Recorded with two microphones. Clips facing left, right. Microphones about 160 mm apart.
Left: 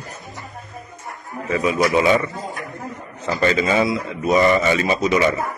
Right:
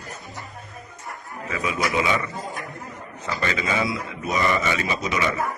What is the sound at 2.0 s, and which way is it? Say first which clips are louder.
Speech: left 7 dB; 35° left (ahead or behind).